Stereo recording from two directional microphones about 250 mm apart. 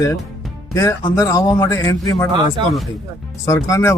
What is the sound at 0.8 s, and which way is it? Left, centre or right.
Speech, centre.